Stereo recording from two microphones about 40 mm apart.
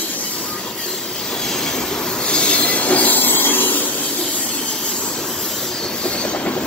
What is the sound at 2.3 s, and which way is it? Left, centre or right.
Train, left.